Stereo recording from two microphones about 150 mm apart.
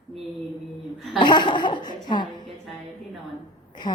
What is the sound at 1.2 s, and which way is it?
Chuckle, 30° left (ahead or behind).